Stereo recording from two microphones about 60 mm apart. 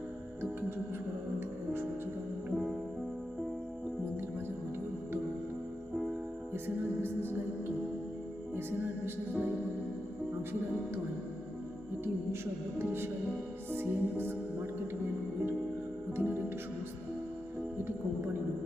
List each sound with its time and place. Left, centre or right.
5.9 s music: centre
7.0 s music: right
9.3 s music: right
12.8 s music: right
13.7 s speech: right
16.1 s music: right